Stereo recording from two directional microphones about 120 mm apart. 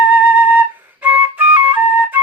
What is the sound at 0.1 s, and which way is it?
Flute, 15° right (ahead or behind).